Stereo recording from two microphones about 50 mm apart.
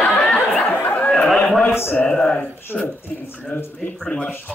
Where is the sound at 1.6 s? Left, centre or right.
Left.